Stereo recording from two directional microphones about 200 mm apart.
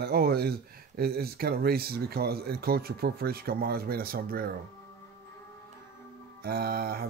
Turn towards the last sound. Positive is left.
turn(degrees=-50)  # may be behind; listen again after turning